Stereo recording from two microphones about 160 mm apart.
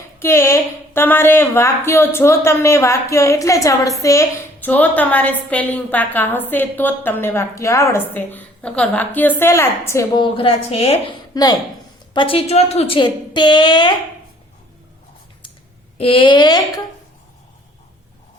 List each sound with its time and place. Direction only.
0.2 s a woman's voice: 15° left (ahead or behind)
10.2 s a woman's voice: 35° left (ahead or behind)
16.0 s a woman's voice: 35° left (ahead or behind)